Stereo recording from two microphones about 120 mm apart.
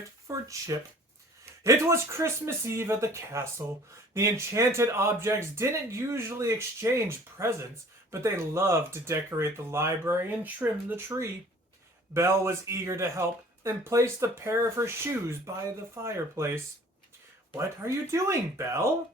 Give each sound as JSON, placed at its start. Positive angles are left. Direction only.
{"t": 0.3, "sound": "speech", "side_deg": -25}